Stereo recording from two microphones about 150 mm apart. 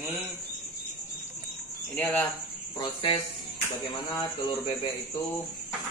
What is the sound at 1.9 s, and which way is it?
Speech, 10° left (ahead or behind).